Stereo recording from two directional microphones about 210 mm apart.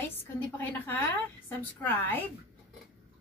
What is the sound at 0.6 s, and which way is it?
A woman's voice, 10° left (ahead or behind).